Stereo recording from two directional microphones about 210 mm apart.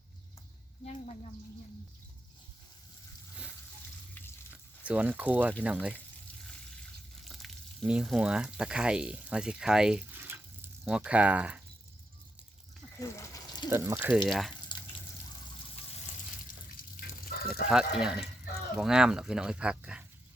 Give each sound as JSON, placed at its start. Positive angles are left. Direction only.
{"t": 0.9, "sound": "speech", "side_deg": 30}
{"t": 4.5, "sound": "speech", "side_deg": -5}
{"t": 7.3, "sound": "speech", "side_deg": 0}
{"t": 13.0, "sound": "a sound", "side_deg": 15}
{"t": 13.7, "sound": "speech", "side_deg": -15}
{"t": 16.5, "sound": "water tap", "side_deg": 45}
{"t": 17.7, "sound": "speech", "side_deg": -5}